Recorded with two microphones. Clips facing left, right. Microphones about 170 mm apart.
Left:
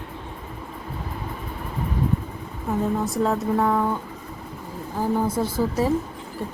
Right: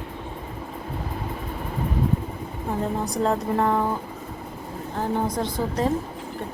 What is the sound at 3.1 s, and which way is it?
Speech, centre (ahead or behind).